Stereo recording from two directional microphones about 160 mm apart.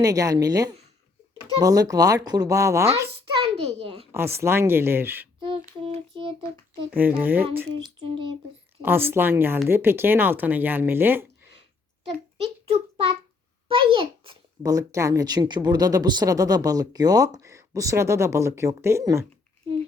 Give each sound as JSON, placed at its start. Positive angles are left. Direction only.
{"t": 0.0, "sound": "speech", "side_deg": -20}
{"t": 3.4, "sound": "a child's voice", "side_deg": -40}
{"t": 4.1, "sound": "speech", "side_deg": -15}
{"t": 5.4, "sound": "child singing", "side_deg": -35}
{"t": 7.2, "sound": "speech", "side_deg": -10}
{"t": 7.9, "sound": "speech", "side_deg": -35}
{"t": 8.8, "sound": "speech", "side_deg": -15}
{"t": 12.0, "sound": "a sound", "side_deg": -40}
{"t": 14.6, "sound": "speech", "side_deg": -20}